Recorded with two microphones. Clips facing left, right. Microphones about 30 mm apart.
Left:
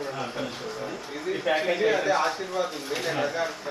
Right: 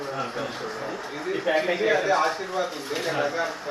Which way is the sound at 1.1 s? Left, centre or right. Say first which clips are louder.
Right 1 dB; centre.